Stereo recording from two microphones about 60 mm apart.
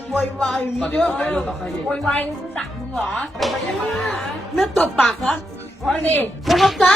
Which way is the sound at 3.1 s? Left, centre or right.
Centre.